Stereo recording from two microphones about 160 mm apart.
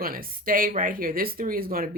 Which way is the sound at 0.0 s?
65° right (ahead or behind).